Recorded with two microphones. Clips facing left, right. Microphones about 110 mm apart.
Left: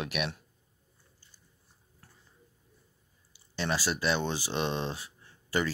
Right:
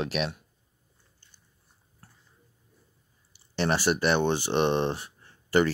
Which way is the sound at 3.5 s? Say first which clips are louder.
Right 6 dB; 65° right (ahead or behind).